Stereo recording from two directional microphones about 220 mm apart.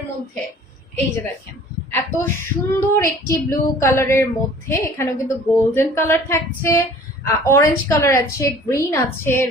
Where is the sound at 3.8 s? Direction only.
10° left (ahead or behind).